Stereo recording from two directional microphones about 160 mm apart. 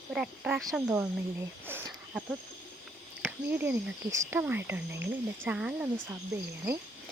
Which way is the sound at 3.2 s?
15° right (ahead or behind).